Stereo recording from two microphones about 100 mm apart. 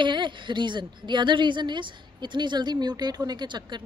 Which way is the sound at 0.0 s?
50° right (ahead or behind).